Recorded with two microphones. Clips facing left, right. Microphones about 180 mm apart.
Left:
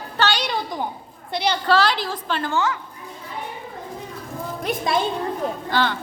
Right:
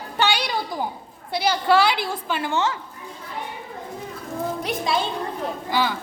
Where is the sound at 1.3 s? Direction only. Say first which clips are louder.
Right 1 dB; 5° right (ahead or behind).